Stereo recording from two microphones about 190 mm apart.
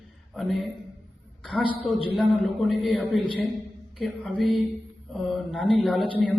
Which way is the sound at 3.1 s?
25° left (ahead or behind).